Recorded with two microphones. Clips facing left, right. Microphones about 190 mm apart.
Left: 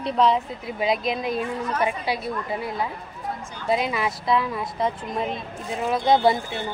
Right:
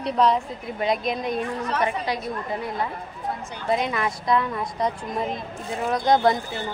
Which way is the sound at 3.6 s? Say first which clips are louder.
Even; 5° left (ahead or behind).